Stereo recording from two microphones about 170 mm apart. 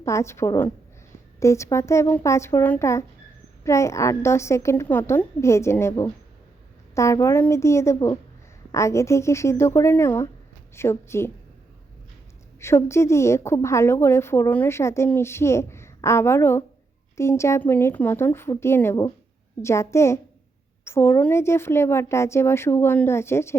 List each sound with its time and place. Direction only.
0.0 s a woman's voice: 15° left (ahead or behind)
12.5 s a woman's voice: 15° left (ahead or behind)